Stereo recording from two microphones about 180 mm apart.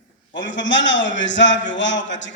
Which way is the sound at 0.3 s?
90° left.